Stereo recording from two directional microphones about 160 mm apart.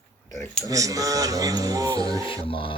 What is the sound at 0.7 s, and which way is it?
Speech, 20° right (ahead or behind).